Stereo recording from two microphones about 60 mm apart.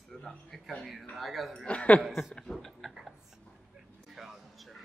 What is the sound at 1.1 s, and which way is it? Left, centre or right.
Speech, centre.